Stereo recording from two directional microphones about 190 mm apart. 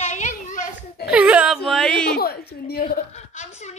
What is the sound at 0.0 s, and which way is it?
Children playing, 40° left (ahead or behind).